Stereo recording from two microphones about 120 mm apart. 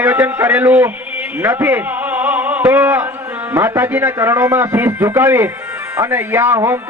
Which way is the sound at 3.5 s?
15° right (ahead or behind).